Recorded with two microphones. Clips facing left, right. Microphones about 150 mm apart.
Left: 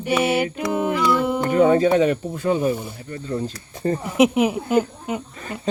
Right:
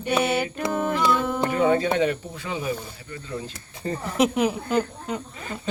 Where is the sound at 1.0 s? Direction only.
20° right (ahead or behind).